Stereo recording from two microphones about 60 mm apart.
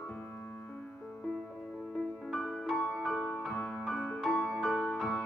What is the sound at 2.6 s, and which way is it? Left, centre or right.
Music, centre.